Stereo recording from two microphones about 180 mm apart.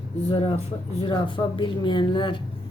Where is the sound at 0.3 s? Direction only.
30° left (ahead or behind).